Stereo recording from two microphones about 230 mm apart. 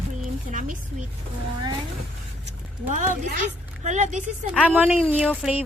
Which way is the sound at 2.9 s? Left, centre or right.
Right.